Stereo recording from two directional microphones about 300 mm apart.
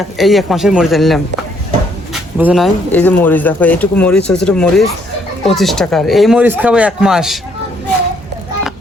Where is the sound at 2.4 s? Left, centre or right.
Centre.